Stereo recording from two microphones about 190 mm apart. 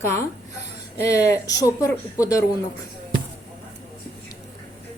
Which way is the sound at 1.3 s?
15° left (ahead or behind).